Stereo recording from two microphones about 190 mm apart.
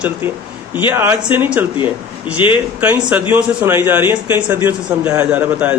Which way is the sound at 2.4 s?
25° left (ahead or behind).